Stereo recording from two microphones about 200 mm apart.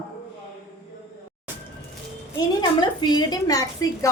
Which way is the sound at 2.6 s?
20° left (ahead or behind).